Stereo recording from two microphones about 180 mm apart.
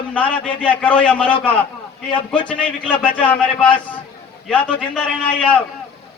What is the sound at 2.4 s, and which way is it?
Speech, 5° left (ahead or behind).